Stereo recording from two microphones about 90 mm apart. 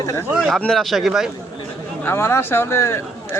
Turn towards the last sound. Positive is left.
turn(degrees=30)  # may be behind; listen again after turning